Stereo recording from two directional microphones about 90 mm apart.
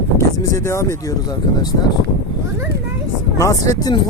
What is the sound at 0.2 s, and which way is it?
Speech, 30° left (ahead or behind).